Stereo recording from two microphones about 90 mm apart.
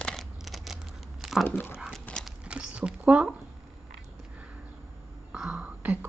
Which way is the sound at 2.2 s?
10° right (ahead or behind).